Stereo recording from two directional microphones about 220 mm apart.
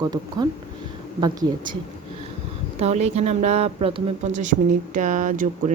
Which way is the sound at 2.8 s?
30° right (ahead or behind).